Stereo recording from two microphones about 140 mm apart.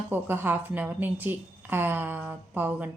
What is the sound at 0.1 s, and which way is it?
A woman's voice, 15° right (ahead or behind).